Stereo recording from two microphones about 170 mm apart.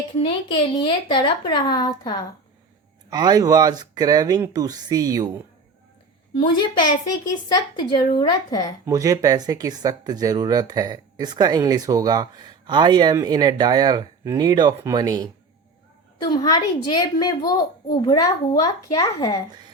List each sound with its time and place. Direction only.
0.2 s speech: 30° left (ahead or behind)
3.1 s speech: 25° right (ahead or behind)
6.6 s speech: 25° left (ahead or behind)
8.9 s speech: 20° right (ahead or behind)
16.3 s speech: 20° left (ahead or behind)